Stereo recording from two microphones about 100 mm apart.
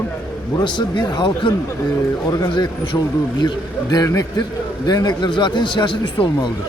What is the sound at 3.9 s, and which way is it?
A man's voice, 35° left (ahead or behind).